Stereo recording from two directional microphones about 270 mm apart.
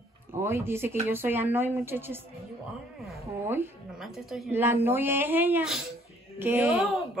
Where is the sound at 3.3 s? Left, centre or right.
Centre.